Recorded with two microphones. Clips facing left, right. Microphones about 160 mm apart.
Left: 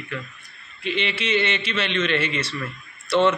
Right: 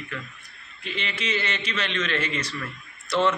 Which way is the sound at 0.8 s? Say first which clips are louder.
Left 6 dB; 85° left.